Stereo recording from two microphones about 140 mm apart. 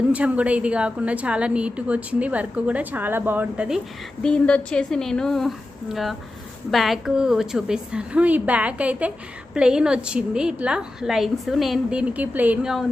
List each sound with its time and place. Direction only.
0.1 s a woman's voice: 10° right (ahead or behind)
4.2 s a woman's voice: 5° left (ahead or behind)